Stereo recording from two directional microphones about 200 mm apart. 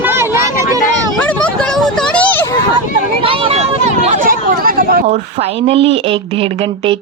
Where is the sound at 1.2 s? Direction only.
5° left (ahead or behind).